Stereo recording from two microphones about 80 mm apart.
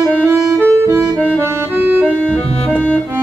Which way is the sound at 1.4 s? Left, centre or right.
Right.